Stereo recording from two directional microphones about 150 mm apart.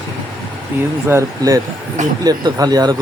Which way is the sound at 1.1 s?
20° right (ahead or behind).